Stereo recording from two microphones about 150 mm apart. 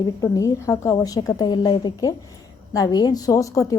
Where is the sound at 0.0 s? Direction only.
25° left (ahead or behind).